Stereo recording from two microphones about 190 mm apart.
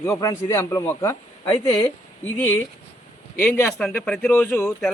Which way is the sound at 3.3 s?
15° left (ahead or behind).